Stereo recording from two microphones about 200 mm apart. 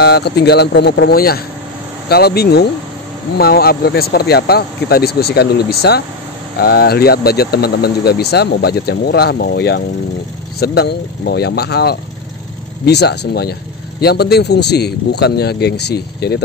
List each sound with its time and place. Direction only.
0.0 s speech: 55° left (ahead or behind)